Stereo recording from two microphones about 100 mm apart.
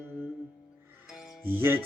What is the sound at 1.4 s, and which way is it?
Music, 20° right (ahead or behind).